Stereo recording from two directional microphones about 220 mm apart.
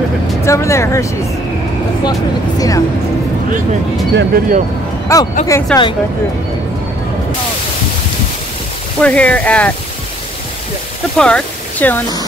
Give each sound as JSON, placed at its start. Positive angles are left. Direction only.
{"t": 0.4, "sound": "speech", "side_deg": 15}
{"t": 2.0, "sound": "speech", "side_deg": 15}
{"t": 4.1, "sound": "speech", "side_deg": -50}
{"t": 5.1, "sound": "speech", "side_deg": 15}
{"t": 9.0, "sound": "speech", "side_deg": 5}
{"t": 11.1, "sound": "speech", "side_deg": 5}